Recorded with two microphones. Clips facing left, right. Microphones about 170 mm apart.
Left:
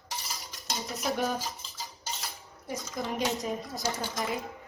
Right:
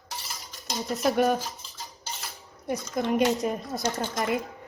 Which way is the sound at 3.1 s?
65° right (ahead or behind).